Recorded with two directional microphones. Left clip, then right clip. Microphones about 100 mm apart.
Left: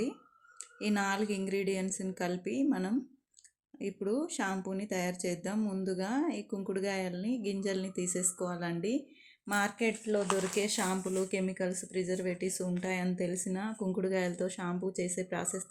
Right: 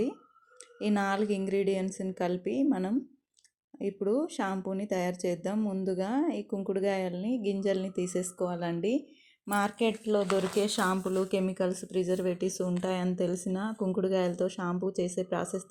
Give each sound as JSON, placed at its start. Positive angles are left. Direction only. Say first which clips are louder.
{"t": 0.8, "sound": "a woman's voice", "louder": "right 3 dB", "side_deg": -25}
{"t": 9.5, "sound": "a woman's voice", "louder": "right 3 dB", "side_deg": -25}
{"t": 10.5, "sound": "speech", "louder": "right 4 dB", "side_deg": -40}